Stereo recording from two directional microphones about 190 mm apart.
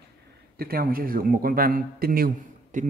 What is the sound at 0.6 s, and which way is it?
Speech, 50° right (ahead or behind).